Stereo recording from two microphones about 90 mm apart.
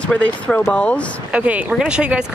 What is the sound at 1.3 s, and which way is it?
Speech, 15° right (ahead or behind).